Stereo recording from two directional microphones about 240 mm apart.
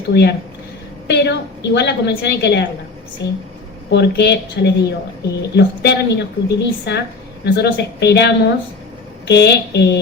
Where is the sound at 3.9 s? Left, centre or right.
Left.